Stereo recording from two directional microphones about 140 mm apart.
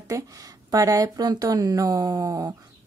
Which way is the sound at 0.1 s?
25° right (ahead or behind).